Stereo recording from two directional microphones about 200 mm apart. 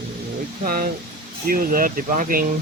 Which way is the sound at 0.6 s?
45° right (ahead or behind).